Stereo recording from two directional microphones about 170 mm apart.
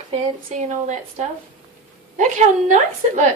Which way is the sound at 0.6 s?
45° right (ahead or behind).